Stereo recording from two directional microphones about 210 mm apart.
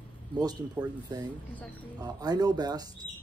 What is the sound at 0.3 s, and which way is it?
Speech, 20° right (ahead or behind).